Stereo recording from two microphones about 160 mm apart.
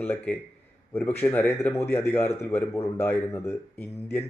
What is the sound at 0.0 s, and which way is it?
A man's voice, 15° left (ahead or behind).